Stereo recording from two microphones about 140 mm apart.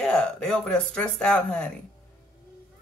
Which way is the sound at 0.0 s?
5° left (ahead or behind).